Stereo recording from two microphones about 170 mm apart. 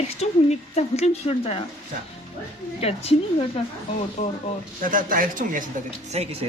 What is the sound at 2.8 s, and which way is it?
Speech, 35° left (ahead or behind).